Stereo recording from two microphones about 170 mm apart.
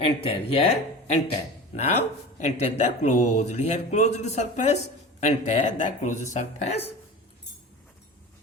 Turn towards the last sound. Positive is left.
turn(degrees=40)  # may be behind; listen again after turning